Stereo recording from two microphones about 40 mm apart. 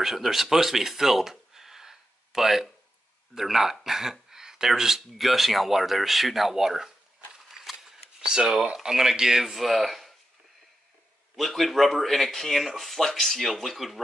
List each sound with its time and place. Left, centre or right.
0.0 s speech: centre
7.4 s a sound: centre
8.2 s speech: centre
11.3 s speech: centre